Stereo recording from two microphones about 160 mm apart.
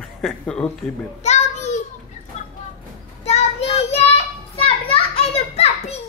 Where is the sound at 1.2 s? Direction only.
45° left (ahead or behind).